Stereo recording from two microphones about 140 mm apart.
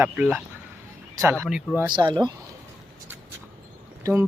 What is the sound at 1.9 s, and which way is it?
Speech, 30° right (ahead or behind).